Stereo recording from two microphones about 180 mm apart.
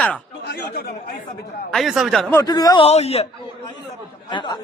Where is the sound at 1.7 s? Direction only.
Centre (ahead or behind).